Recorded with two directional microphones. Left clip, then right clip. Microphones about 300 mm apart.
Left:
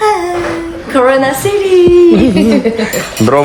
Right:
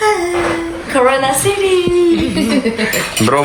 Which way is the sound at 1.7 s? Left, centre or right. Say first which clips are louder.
Left 10 dB; left.